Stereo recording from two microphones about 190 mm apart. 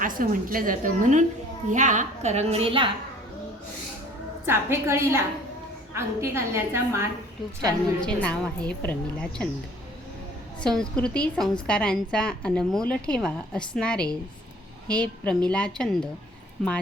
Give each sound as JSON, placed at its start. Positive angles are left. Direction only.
{"t": 0.0, "sound": "a woman's voice", "side_deg": -45}
{"t": 4.4, "sound": "a woman's voice", "side_deg": -10}
{"t": 8.0, "sound": "a woman's voice", "side_deg": 5}
{"t": 10.6, "sound": "a woman's voice", "side_deg": 5}